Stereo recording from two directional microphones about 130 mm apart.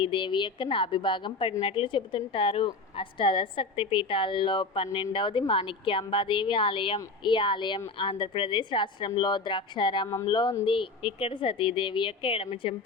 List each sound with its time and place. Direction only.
0.0 s a woman's voice: 40° left (ahead or behind)